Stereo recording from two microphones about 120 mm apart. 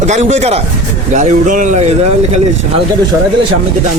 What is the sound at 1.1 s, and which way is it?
Speech, 85° right.